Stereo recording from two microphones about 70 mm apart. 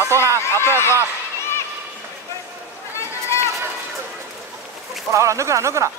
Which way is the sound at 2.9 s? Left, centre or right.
Left.